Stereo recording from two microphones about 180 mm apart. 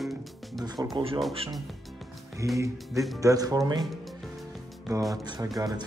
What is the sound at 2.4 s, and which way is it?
Speech, 15° right (ahead or behind).